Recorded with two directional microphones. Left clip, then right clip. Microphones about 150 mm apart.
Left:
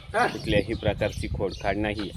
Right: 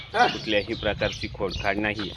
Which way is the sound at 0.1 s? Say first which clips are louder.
Right 3 dB; 30° right (ahead or behind).